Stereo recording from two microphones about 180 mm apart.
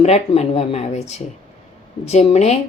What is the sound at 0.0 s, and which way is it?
A woman's voice, 35° left (ahead or behind).